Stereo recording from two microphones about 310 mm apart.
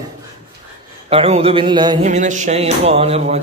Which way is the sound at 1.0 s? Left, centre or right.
Centre.